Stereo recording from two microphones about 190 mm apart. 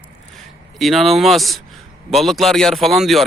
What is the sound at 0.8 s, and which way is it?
Speech, centre (ahead or behind).